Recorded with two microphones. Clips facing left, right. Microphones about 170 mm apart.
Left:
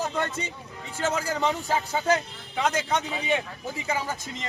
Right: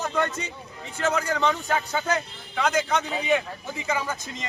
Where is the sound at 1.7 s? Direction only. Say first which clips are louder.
Left 1 dB; 5° left (ahead or behind).